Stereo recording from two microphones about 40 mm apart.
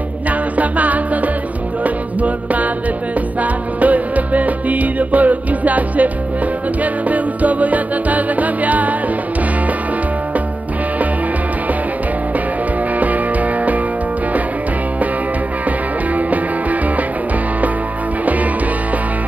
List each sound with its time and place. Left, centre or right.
0.3 s music: right
13.0 s music: right